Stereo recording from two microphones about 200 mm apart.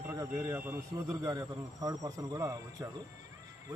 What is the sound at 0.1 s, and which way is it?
A man's voice, 15° right (ahead or behind).